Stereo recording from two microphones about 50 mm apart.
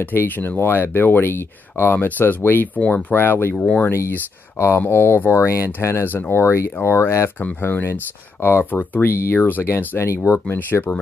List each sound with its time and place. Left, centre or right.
0.0 s speech: left
2.8 s speech: left
3.1 s speech: left
3.5 s speech: left
4.6 s speech: left
7.6 s speech: left
9.1 s speech: left
9.5 s speech: left
9.9 s speech: left
10.5 s speech: left